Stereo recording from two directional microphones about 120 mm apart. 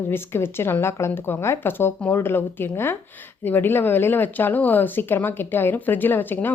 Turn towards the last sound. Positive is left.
turn(degrees=15)  # may be behind; listen again after turning